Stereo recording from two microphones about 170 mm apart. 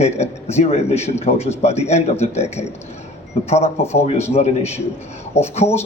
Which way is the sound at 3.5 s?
40° left (ahead or behind).